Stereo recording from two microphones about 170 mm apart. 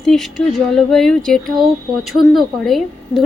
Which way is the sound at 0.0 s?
Centre (ahead or behind).